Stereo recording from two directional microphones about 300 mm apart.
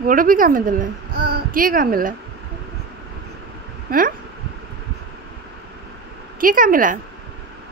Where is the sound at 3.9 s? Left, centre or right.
Right.